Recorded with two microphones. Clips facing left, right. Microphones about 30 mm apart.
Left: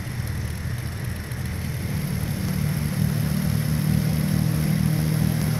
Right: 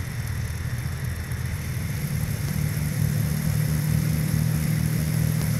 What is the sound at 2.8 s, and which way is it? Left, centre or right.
Vehicle, left.